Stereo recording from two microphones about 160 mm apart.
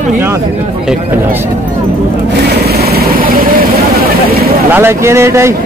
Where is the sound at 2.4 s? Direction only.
80° right.